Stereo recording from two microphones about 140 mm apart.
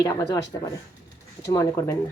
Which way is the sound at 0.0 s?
25° left (ahead or behind).